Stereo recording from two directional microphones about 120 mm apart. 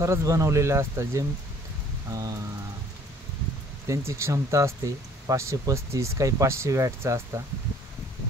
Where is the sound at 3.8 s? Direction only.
25° right (ahead or behind).